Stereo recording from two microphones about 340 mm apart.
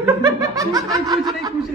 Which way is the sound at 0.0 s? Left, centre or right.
Centre.